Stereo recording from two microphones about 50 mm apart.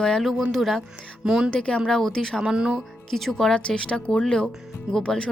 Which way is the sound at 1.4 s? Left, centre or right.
Centre.